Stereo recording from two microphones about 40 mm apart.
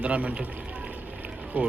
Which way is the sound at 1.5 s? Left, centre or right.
Right.